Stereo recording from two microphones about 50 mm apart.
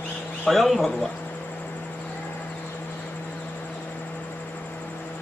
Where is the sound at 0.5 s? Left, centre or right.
Centre.